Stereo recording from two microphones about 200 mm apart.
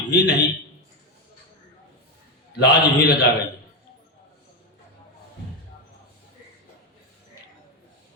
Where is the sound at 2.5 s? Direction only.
55° left (ahead or behind).